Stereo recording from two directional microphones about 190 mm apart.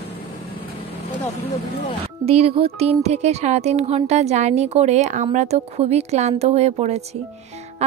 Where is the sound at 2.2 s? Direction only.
30° right (ahead or behind).